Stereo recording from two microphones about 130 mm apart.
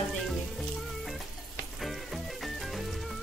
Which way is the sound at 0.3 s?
Centre (ahead or behind).